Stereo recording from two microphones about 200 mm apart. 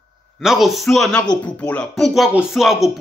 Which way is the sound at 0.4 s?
Centre (ahead or behind).